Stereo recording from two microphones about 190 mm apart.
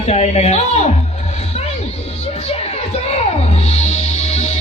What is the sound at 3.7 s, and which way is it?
Music, 35° left (ahead or behind).